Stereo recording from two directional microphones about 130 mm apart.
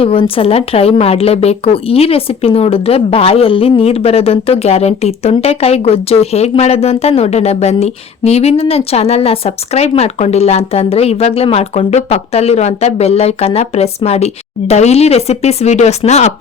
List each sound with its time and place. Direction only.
0.0 s a woman's voice: 45° left (ahead or behind)